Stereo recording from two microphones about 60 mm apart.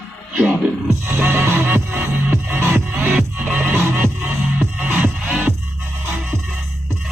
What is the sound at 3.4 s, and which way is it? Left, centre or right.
Music, right.